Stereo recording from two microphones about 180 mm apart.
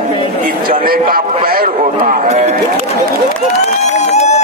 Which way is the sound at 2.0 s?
40° right (ahead or behind).